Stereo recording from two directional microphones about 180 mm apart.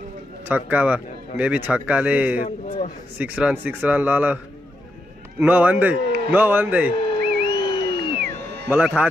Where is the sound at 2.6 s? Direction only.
45° left (ahead or behind).